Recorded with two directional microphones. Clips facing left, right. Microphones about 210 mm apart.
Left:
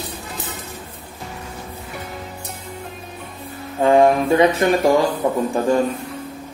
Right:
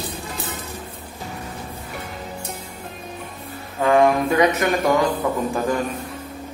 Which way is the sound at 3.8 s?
30° left (ahead or behind).